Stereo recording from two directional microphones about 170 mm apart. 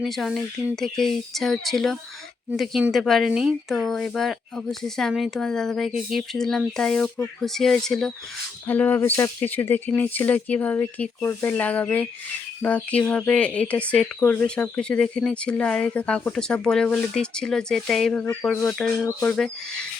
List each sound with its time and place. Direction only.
0.0 s speech: centre (ahead or behind)